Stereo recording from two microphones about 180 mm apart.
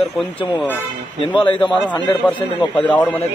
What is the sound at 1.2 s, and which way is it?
Speech, 30° left (ahead or behind).